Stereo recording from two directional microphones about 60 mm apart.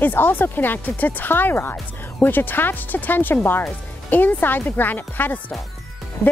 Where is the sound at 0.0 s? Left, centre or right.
Left.